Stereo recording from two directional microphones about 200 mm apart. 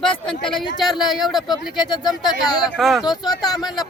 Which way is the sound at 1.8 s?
20° left (ahead or behind).